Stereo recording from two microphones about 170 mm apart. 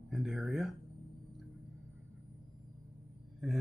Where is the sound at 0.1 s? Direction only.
Centre (ahead or behind).